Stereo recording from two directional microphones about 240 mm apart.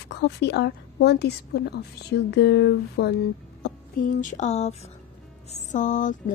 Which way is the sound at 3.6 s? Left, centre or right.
Left.